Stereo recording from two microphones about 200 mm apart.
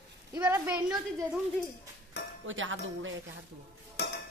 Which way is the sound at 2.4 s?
75° right (ahead or behind).